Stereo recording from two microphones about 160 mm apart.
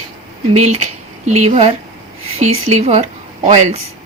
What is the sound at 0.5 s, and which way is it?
A woman's voice, 45° right (ahead or behind).